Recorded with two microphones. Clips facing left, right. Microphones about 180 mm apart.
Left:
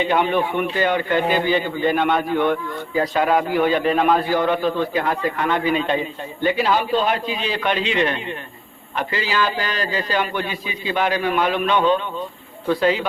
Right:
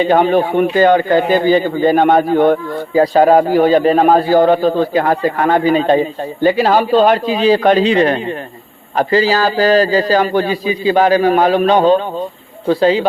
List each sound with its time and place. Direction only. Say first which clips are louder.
0.0 s a man's voice: right 7 dB; 35° right (ahead or behind)
6.9 s speech: right 12 dB; 80° right
7.4 s a man's voice: right 14 dB; 40° right (ahead or behind)